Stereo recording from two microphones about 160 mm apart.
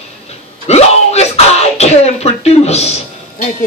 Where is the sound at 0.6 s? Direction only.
40° left (ahead or behind).